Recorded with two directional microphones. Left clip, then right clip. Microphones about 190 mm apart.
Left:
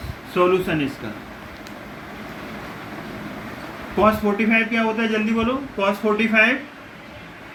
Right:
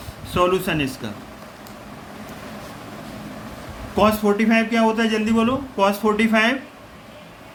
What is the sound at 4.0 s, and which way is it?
A man's voice, 50° right (ahead or behind).